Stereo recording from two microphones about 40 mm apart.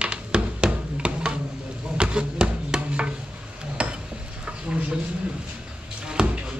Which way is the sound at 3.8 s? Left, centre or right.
Right.